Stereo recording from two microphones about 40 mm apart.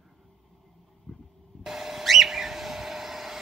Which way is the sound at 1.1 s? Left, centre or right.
Left.